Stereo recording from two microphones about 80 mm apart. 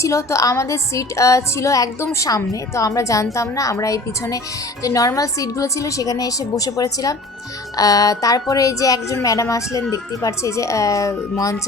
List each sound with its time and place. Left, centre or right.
0.0 s a woman's voice: left